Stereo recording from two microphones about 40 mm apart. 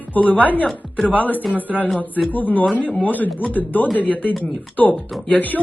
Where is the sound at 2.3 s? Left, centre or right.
Left.